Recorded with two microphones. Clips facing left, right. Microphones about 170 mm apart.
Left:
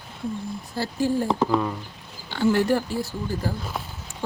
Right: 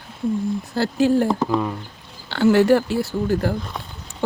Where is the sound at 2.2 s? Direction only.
80° right.